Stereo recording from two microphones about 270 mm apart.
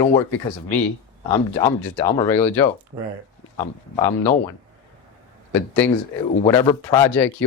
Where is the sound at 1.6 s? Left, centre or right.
Centre.